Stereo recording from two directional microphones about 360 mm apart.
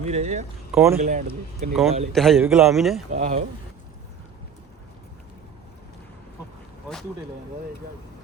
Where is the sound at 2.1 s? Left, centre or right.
Centre.